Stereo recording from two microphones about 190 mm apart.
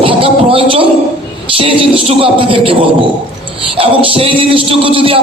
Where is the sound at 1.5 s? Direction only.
30° right (ahead or behind).